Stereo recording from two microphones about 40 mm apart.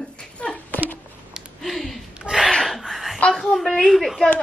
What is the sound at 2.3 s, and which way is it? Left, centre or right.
Speech, right.